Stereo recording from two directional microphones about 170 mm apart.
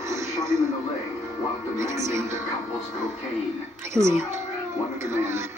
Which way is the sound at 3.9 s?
15° right (ahead or behind).